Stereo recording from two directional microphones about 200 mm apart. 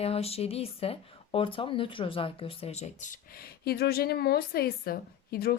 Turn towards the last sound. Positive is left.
turn(degrees=50)  # may be behind; listen again after turning